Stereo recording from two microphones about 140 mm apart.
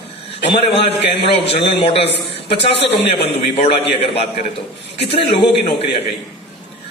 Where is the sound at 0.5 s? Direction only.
40° left (ahead or behind).